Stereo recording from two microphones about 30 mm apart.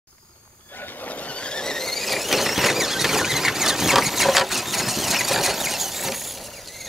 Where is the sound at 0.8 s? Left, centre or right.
Left.